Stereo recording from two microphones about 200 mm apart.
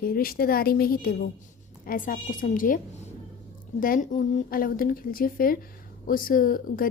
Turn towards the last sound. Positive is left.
turn(degrees=45)  # may be behind; listen again after turning